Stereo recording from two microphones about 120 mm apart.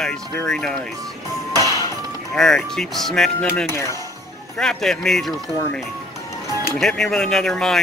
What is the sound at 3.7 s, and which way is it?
Speech, 25° left (ahead or behind).